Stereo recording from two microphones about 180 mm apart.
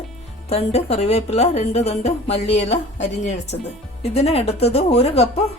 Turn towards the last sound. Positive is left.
turn(degrees=35)  # may be behind; listen again after turning